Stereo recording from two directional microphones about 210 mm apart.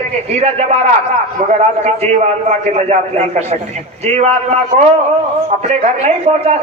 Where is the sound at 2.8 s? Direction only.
30° right (ahead or behind).